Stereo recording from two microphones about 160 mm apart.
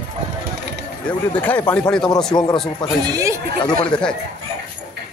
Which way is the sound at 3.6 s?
25° left (ahead or behind).